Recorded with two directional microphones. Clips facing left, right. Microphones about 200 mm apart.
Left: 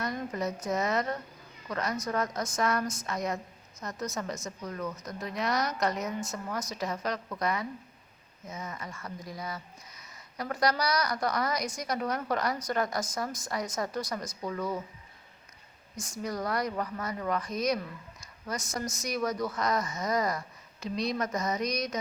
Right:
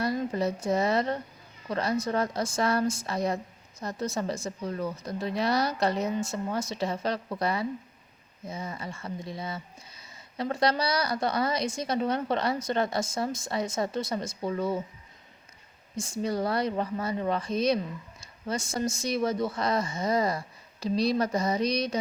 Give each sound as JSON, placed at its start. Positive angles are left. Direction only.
{"t": 0.0, "sound": "a woman's voice", "side_deg": -30}
{"t": 16.0, "sound": "a woman's voice", "side_deg": -30}